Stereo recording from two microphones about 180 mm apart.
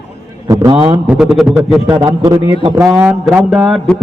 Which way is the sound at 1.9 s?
25° right (ahead or behind).